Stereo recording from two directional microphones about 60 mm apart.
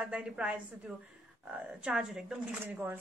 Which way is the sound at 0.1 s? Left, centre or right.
Centre.